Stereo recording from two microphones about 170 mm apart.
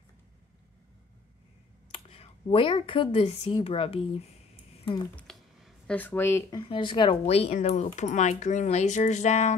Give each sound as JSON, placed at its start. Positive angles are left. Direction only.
{"t": 1.9, "sound": "speech", "side_deg": 35}
{"t": 5.1, "sound": "a sound", "side_deg": 0}
{"t": 5.9, "sound": "speech", "side_deg": 10}
{"t": 6.6, "sound": "speech", "side_deg": 30}